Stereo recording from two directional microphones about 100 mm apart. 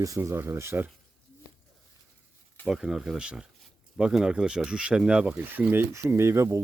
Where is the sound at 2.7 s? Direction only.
5° right (ahead or behind).